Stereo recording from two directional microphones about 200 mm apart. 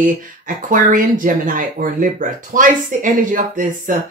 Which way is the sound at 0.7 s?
40° right (ahead or behind).